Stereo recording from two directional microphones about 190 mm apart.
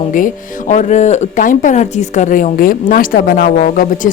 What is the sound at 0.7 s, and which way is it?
A woman's voice, 40° left (ahead or behind).